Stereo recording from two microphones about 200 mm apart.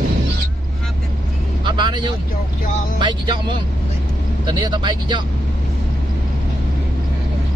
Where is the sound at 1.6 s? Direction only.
20° right (ahead or behind).